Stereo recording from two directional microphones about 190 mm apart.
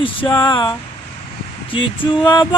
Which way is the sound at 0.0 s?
25° left (ahead or behind).